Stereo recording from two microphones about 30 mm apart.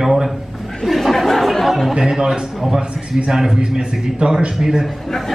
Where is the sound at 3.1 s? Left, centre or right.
Right.